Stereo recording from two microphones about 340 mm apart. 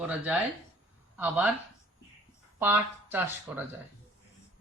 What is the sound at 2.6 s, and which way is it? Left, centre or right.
Speech, centre.